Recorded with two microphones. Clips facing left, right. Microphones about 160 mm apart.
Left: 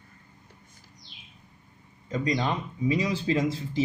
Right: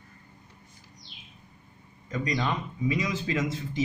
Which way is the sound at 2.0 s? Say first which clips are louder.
Left 2 dB; 25° left (ahead or behind).